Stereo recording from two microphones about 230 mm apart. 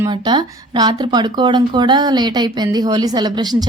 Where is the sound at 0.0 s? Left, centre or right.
Centre.